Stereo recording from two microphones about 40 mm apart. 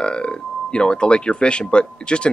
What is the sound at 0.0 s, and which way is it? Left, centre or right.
Speech, left.